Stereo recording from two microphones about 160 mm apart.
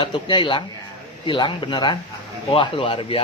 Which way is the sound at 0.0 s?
30° left (ahead or behind).